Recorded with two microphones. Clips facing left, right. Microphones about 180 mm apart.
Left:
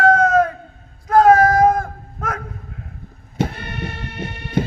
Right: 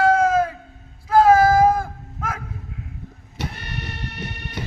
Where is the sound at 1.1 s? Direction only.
30° right (ahead or behind).